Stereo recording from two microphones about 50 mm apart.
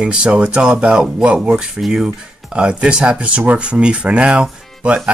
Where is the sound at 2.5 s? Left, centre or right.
Centre.